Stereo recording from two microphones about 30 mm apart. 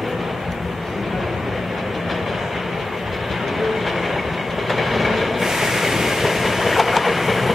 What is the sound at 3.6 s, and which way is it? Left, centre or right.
Train, centre.